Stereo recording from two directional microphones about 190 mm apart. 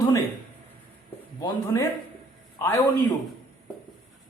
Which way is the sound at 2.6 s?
15° left (ahead or behind).